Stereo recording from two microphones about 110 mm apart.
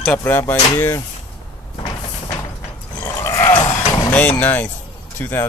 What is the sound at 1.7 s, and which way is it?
Cupboard open or close, 35° left (ahead or behind).